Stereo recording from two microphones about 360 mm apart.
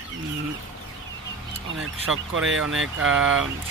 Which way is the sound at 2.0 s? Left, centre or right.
Right.